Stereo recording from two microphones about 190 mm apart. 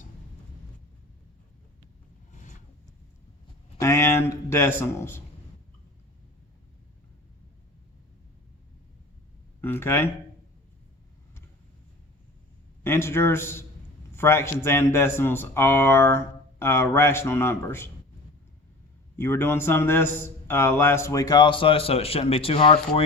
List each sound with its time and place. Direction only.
2.3 s a sound: 40° left (ahead or behind)
3.8 s speech: 15° left (ahead or behind)
9.6 s speech: 10° left (ahead or behind)
12.8 s a man's voice: 15° left (ahead or behind)
19.1 s a man's voice: 10° left (ahead or behind); by 23.0 s 30° left (ahead or behind)